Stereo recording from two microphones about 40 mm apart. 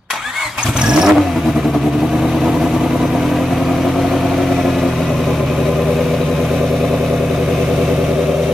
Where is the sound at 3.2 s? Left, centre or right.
Centre.